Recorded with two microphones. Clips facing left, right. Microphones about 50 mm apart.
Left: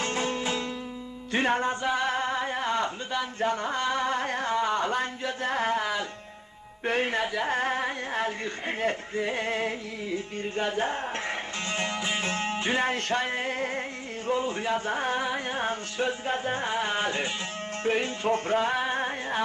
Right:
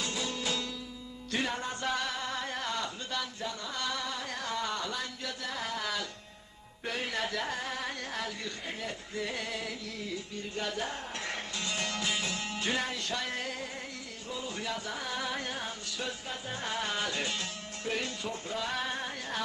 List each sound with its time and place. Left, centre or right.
0.0 s music: left
1.8 s singing: left
2.0 s singing: left
3.4 s singing: left
5.8 s music: left
6.8 s music: left
7.2 s speech: centre
7.4 s music: left
9.1 s music: left
12.9 s music: left
15.5 s music: left
18.3 s music: left
18.7 s music: left